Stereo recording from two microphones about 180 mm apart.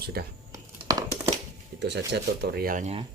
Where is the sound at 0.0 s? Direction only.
60° right (ahead or behind).